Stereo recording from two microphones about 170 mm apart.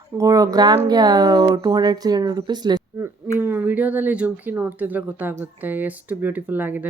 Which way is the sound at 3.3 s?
15° right (ahead or behind).